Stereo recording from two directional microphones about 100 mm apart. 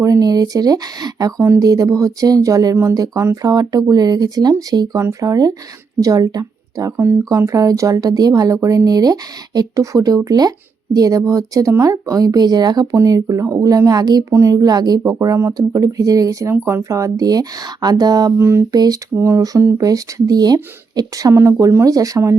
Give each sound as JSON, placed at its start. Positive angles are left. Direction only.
{"t": 0.0, "sound": "speech", "side_deg": -35}
{"t": 18.3, "sound": "a sound", "side_deg": -25}
{"t": 18.7, "sound": "speech", "side_deg": -40}
{"t": 19.1, "sound": "speech", "side_deg": -30}